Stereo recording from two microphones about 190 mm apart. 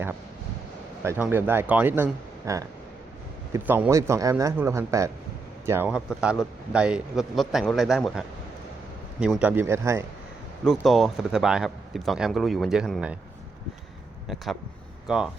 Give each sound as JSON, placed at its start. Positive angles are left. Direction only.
{"t": 1.0, "sound": "a man's voice", "side_deg": -10}
{"t": 9.2, "sound": "a man's voice", "side_deg": -5}
{"t": 10.7, "sound": "a man's voice", "side_deg": 0}
{"t": 15.0, "sound": "speech", "side_deg": -5}